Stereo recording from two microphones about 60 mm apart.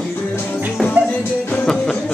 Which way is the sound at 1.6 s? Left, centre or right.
Centre.